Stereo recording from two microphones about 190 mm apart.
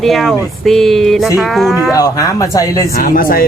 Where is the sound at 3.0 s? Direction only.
50° left (ahead or behind).